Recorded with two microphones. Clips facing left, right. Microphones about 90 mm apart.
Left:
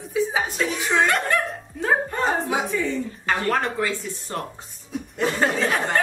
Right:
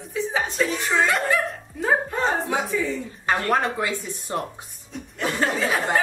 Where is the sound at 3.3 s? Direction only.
15° right (ahead or behind).